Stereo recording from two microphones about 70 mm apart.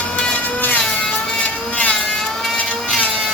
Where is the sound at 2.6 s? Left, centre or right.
Centre.